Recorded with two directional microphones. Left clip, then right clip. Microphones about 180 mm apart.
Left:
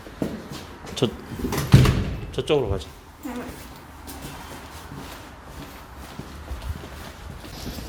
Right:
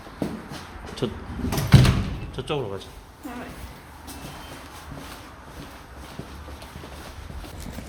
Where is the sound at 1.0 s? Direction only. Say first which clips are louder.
Left 5 dB; 30° left (ahead or behind).